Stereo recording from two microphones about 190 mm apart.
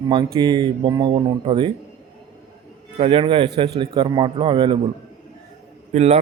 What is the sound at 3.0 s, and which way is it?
A man's voice, 30° right (ahead or behind).